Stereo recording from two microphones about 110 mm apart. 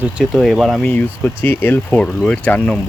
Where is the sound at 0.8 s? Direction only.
15° left (ahead or behind).